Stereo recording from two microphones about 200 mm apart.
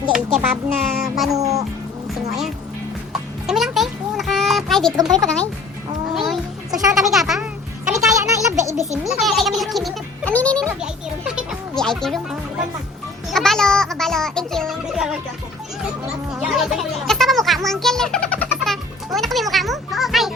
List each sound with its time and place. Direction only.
0.5 s speech: 10° right (ahead or behind)
1.1 s speech: centre (ahead or behind)
1.4 s speech: 15° right (ahead or behind)
3.1 s a sound: centre (ahead or behind)
5.0 s speech: centre (ahead or behind)
6.1 s a sound: centre (ahead or behind)
6.9 s speech: centre (ahead or behind)
7.9 s a sound: 15° right (ahead or behind)
8.6 s a child's voice: 15° left (ahead or behind)
9.0 s speech: centre (ahead or behind)
11.8 s speech: centre (ahead or behind)
16.4 s music: centre (ahead or behind)